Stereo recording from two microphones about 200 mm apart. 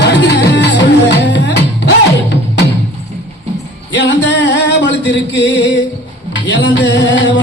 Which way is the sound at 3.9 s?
60° left (ahead or behind).